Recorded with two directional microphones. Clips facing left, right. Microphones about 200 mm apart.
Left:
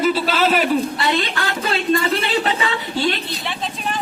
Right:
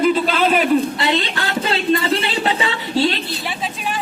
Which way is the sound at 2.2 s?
25° right (ahead or behind).